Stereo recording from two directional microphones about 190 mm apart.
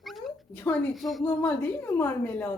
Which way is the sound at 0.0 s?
Centre (ahead or behind).